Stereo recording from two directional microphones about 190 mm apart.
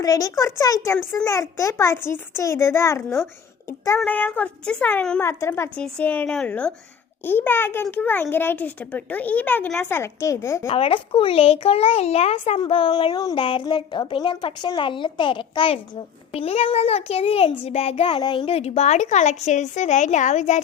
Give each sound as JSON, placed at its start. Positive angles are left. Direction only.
{"t": 0.0, "sound": "a child's voice", "side_deg": 20}
{"t": 10.7, "sound": "a child's voice", "side_deg": 30}